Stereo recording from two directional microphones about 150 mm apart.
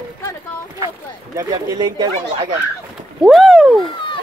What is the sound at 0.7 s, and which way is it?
Speech, 25° right (ahead or behind).